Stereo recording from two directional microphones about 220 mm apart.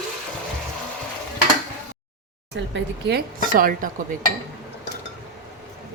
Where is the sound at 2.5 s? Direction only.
50° right (ahead or behind).